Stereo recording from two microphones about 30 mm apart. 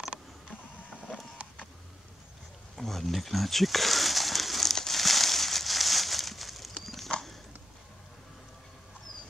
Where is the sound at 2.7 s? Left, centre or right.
Centre.